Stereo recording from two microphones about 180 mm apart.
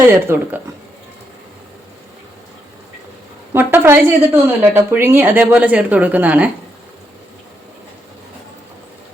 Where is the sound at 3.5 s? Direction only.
10° right (ahead or behind).